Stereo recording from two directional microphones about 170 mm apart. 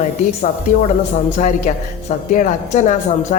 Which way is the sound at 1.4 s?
45° left (ahead or behind).